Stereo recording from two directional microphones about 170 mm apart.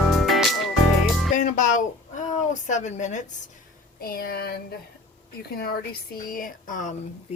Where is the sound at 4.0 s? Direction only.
60° left (ahead or behind).